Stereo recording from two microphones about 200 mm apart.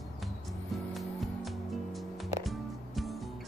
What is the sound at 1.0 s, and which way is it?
Music, centre (ahead or behind).